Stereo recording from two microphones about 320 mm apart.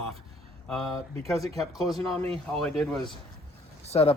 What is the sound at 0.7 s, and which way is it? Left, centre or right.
Speech, centre.